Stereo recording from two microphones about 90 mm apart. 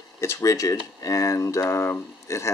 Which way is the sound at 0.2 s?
35° left (ahead or behind).